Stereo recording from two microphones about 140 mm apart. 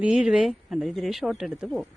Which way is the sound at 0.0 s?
5° right (ahead or behind).